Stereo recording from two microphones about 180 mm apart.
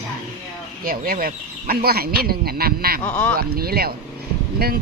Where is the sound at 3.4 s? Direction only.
55° right (ahead or behind).